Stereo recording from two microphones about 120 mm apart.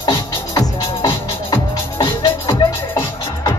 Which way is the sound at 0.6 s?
35° left (ahead or behind).